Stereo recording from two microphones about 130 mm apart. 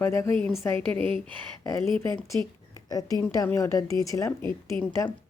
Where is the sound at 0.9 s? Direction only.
45° right (ahead or behind).